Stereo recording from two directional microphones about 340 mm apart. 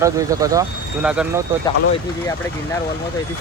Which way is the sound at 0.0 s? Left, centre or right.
Centre.